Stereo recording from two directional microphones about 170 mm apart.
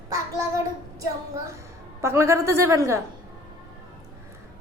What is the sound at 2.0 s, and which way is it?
A woman's voice, 15° right (ahead or behind).